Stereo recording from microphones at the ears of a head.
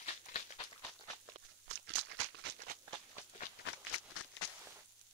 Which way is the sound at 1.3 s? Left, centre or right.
Right.